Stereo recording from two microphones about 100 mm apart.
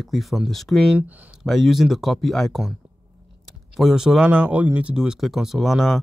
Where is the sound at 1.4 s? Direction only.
Centre (ahead or behind).